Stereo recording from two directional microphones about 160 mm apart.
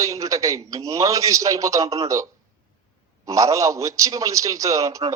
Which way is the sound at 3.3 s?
20° right (ahead or behind).